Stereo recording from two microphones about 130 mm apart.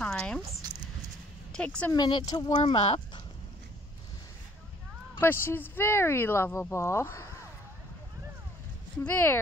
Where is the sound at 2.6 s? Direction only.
50° left (ahead or behind).